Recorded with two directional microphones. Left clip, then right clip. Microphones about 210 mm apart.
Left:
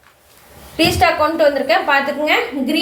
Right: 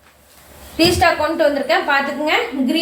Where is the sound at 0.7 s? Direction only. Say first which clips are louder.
Even; 35° left (ahead or behind).